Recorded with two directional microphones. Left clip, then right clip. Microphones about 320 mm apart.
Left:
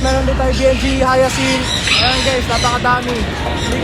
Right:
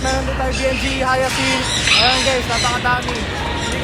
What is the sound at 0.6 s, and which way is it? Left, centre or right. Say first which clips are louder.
Speech: left 6 dB; centre.